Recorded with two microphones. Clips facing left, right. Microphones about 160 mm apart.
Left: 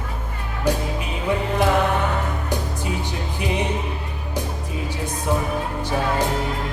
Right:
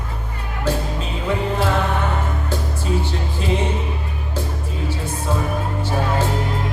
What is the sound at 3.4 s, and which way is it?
Music, 15° left (ahead or behind).